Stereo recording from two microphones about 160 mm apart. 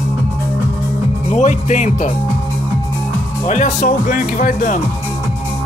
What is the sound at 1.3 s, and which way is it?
Speech, 50° left (ahead or behind).